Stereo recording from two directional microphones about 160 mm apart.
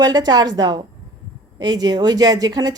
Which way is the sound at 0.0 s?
25° right (ahead or behind).